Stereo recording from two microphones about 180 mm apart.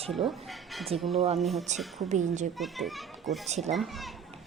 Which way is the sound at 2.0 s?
40° right (ahead or behind).